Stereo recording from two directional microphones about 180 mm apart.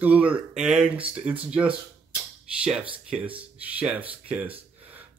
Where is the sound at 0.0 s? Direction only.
5° right (ahead or behind).